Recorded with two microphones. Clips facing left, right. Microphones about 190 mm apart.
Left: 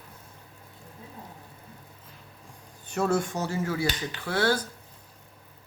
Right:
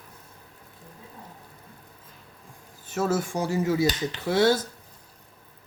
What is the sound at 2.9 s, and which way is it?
Speech, 5° right (ahead or behind).